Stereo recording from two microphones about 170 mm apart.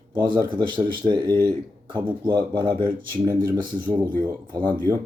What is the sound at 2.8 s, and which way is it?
Speech, 60° right (ahead or behind).